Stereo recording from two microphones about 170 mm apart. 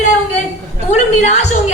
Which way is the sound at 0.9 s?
40° left (ahead or behind).